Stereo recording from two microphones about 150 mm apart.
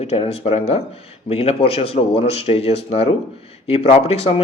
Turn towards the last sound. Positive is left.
turn(degrees=40)  # may be behind; listen again after turning